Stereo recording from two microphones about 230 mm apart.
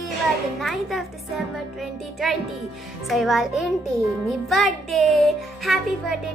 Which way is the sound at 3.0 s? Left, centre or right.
Centre.